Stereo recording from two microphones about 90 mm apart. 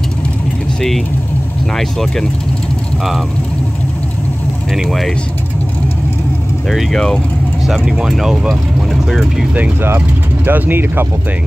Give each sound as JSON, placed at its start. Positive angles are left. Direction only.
{"t": 0.7, "sound": "speech", "side_deg": 5}
{"t": 4.7, "sound": "speech", "side_deg": 0}
{"t": 6.7, "sound": "speech", "side_deg": 0}
{"t": 7.6, "sound": "speech", "side_deg": -5}
{"t": 9.6, "sound": "speech", "side_deg": -25}